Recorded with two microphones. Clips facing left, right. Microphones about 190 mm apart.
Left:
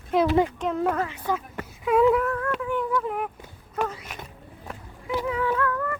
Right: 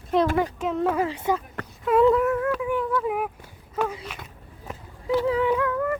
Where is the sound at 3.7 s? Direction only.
5° right (ahead or behind).